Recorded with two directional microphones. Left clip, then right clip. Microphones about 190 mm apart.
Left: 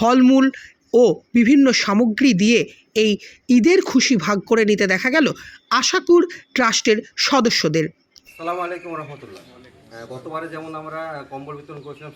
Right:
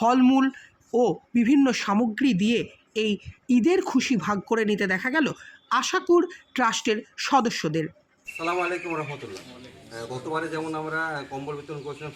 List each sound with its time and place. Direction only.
0.0 s speech: 5° left (ahead or behind)
10.7 s a man's voice: 25° left (ahead or behind)